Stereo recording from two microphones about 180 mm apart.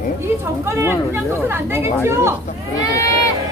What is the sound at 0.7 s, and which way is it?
Speech, 15° right (ahead or behind).